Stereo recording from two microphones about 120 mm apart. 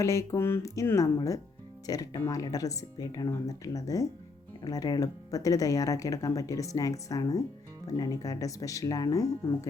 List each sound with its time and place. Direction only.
0.0 s speech: 25° left (ahead or behind)